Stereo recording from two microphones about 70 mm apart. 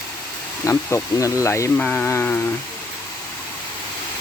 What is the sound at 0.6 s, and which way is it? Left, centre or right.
Speech, left.